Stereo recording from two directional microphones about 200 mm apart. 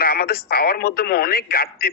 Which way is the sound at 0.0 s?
50° left (ahead or behind).